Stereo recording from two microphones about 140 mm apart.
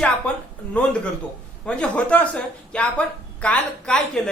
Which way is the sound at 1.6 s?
5° left (ahead or behind).